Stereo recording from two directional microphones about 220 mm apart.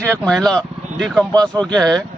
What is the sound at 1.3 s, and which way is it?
Speech, 15° right (ahead or behind).